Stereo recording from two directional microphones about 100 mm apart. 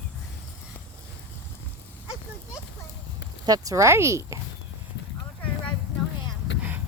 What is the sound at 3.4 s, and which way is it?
Speech, 35° right (ahead or behind).